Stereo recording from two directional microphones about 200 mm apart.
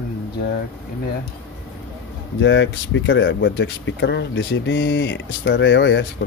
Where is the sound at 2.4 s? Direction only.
65° left (ahead or behind).